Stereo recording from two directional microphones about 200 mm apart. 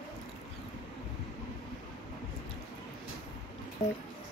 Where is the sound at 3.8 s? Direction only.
35° left (ahead or behind).